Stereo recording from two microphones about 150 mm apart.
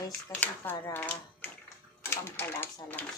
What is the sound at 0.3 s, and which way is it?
Speech, 20° left (ahead or behind).